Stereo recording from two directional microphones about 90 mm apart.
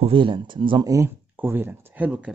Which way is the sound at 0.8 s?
35° right (ahead or behind).